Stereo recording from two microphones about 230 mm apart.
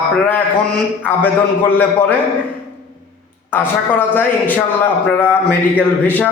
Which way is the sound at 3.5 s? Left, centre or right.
Centre.